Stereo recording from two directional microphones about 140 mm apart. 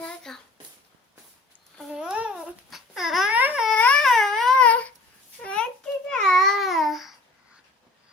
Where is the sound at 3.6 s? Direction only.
10° left (ahead or behind).